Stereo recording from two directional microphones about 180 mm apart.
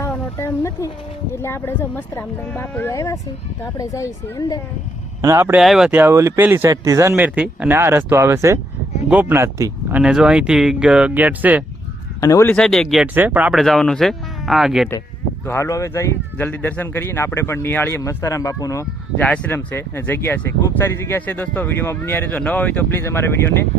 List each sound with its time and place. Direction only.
0.0 s a sound: 15° left (ahead or behind)
1.3 s speech: 15° left (ahead or behind)
5.2 s speech: 15° right (ahead or behind)
5.5 s speech: centre (ahead or behind)
10.0 s speech: 5° right (ahead or behind)
12.2 s speech: 15° left (ahead or behind)
12.5 s speech: 5° left (ahead or behind)
15.4 s speech: 15° left (ahead or behind)